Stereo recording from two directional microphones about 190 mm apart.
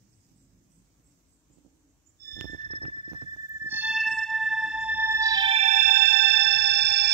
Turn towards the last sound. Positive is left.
turn(degrees=-60)  # may be behind; listen again after turning